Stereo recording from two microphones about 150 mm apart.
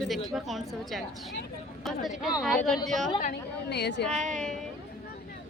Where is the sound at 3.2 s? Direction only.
90° left.